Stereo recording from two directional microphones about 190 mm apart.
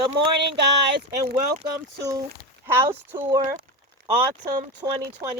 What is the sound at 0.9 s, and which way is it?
Speech, 55° right (ahead or behind).